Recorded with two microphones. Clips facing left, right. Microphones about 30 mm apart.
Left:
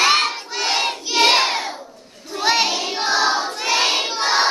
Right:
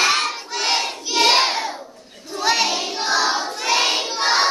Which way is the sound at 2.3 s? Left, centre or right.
Centre.